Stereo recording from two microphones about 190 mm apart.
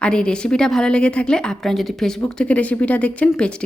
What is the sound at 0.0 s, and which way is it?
A woman's voice, 5° left (ahead or behind).